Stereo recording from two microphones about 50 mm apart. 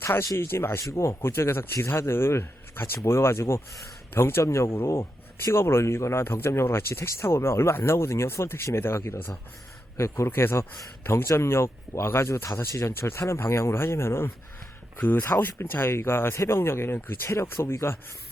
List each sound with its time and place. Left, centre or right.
0.2 s speech: left
0.9 s speech: left
2.0 s speech: left
4.8 s speech: left
10.0 s speech: left
13.1 s speech: left
14.9 s speech: left
15.2 s speech: left
16.3 s speech: left
17.2 s speech: left
17.7 s speech: left